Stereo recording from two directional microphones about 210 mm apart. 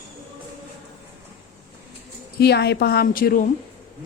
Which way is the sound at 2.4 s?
50° left (ahead or behind).